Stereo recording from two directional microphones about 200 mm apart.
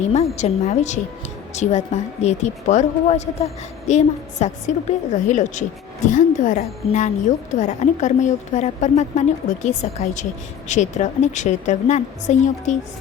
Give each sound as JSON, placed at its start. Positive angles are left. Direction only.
{"t": 0.1, "sound": "a woman's voice", "side_deg": 30}